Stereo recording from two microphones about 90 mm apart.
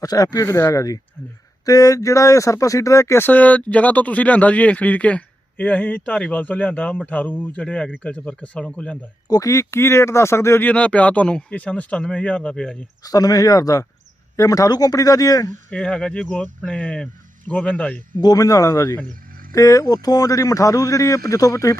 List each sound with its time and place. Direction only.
0.0 s a man's voice: 45° left (ahead or behind)
0.4 s a man's voice: 30° left (ahead or behind); by 9.0 s 10° left (ahead or behind)
9.3 s a man's voice: 40° left (ahead or behind)
10.7 s speech: 15° left (ahead or behind)
13.0 s a man's voice: 45° left (ahead or behind)
15.7 s speech: 5° left (ahead or behind)
18.2 s a man's voice: 45° left (ahead or behind)